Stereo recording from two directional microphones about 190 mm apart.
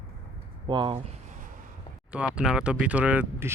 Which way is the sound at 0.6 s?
25° right (ahead or behind).